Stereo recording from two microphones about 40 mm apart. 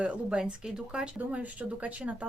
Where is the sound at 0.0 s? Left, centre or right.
Right.